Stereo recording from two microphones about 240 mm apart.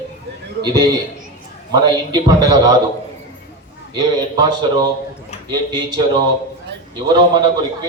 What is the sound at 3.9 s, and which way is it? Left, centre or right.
Speech, centre.